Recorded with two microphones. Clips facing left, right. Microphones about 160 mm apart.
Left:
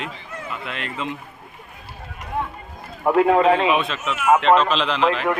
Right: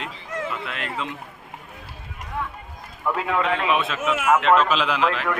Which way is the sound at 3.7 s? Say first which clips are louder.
Left 1 dB; 5° right (ahead or behind).